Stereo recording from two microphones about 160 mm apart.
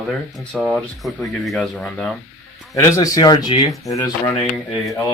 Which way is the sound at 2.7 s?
20° left (ahead or behind).